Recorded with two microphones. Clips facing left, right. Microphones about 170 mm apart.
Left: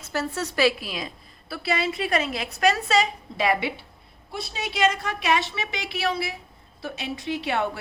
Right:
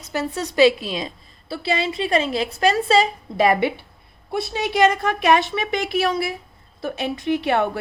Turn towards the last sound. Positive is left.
turn(degrees=-55)  # may be behind; listen again after turning